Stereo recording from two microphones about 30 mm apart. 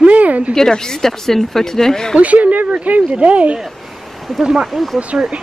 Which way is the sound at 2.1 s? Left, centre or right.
Right.